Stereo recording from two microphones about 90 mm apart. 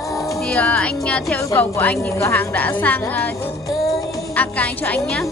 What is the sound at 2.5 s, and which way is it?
Speech, 20° left (ahead or behind).